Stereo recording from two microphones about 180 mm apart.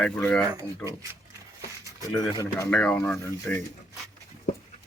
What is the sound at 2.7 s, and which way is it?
Speech, 5° left (ahead or behind).